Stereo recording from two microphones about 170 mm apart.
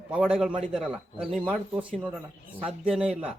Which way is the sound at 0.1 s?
5° right (ahead or behind).